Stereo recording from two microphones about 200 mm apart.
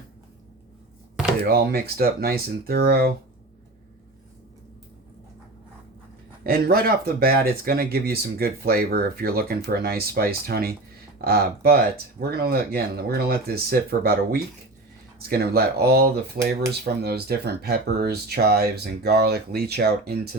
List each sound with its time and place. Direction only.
1.4 s speech: 50° right (ahead or behind)
6.4 s speech: 50° right (ahead or behind)